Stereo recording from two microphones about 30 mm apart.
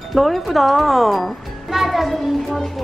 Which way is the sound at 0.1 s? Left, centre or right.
Centre.